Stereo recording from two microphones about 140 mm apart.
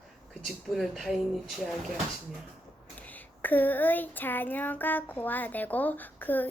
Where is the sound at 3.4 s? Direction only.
10° left (ahead or behind).